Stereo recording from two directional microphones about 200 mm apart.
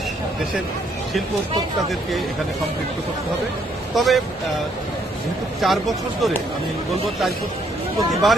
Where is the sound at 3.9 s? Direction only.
Centre (ahead or behind).